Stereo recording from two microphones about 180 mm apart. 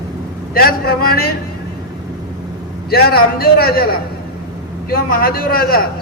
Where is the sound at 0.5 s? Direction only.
55° left (ahead or behind).